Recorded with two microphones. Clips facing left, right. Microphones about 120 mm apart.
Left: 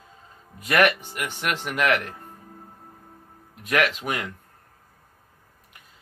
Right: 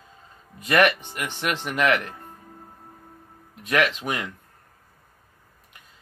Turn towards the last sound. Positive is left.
turn(degrees=10)  # may be behind; listen again after turning